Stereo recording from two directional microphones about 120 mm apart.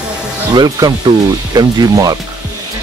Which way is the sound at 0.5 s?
30° right (ahead or behind).